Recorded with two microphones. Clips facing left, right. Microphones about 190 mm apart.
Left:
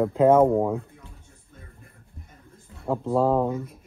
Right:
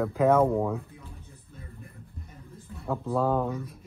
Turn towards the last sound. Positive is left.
turn(degrees=15)  # may be behind; listen again after turning